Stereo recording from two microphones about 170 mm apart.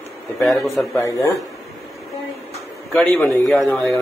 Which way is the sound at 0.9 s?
20° left (ahead or behind).